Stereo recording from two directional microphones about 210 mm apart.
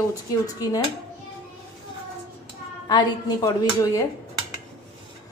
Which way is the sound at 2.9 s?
20° left (ahead or behind).